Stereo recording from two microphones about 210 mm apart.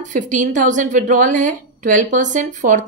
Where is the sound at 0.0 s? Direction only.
35° right (ahead or behind).